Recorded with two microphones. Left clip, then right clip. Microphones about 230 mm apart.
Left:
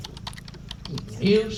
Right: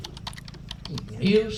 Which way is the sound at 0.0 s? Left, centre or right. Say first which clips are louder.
Even; centre.